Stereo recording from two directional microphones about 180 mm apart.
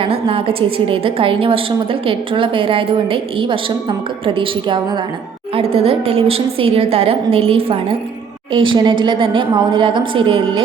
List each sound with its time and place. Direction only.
0.0 s a woman's voice: 30° right (ahead or behind)